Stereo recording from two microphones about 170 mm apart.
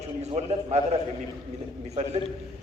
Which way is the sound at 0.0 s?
40° right (ahead or behind).